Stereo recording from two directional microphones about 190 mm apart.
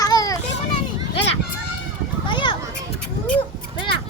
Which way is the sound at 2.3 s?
25° left (ahead or behind).